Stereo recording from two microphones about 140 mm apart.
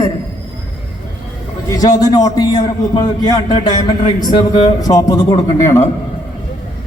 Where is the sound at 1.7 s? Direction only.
25° left (ahead or behind).